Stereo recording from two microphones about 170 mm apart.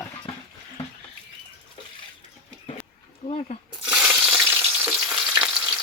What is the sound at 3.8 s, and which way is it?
Frying, 5° right (ahead or behind).